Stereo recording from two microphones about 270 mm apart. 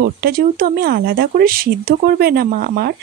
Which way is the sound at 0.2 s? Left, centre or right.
Right.